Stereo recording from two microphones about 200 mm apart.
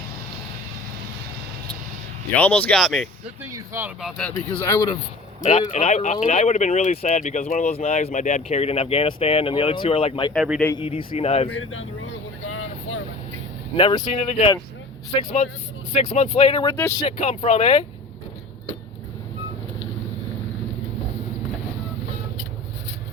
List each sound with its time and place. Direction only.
2.3 s speech: 10° left (ahead or behind)
3.4 s speech: 10° right (ahead or behind)
4.0 s speech: 5° left (ahead or behind)
5.4 s speech: 35° left (ahead or behind)
10.3 s a man's voice: 5° right (ahead or behind)
10.8 s speech: 30° left (ahead or behind)
11.4 s speech: 85° left
12.5 s vehicle: 90° left
13.7 s speech: 20° left (ahead or behind)
15.9 s speech: 35° left (ahead or behind)
16.7 s speech: 10° left (ahead or behind)
17.1 s speech: 35° left (ahead or behind)